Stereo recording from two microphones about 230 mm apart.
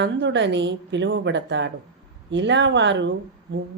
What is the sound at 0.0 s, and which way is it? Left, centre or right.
Speech, right.